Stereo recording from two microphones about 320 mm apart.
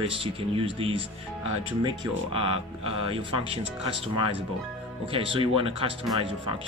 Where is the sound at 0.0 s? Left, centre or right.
Centre.